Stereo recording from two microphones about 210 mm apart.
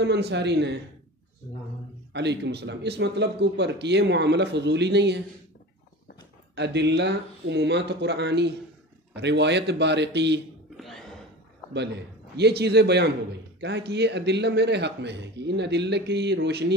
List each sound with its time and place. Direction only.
0.0 s speech: 55° right (ahead or behind)
2.1 s a man's voice: 55° right (ahead or behind)
6.5 s speech: 55° right (ahead or behind)
12.4 s a man's voice: 50° right (ahead or behind)